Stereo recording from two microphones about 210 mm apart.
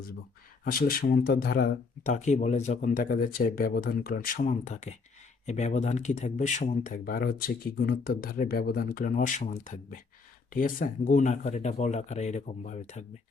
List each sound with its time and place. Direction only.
0.6 s speech: 45° left (ahead or behind)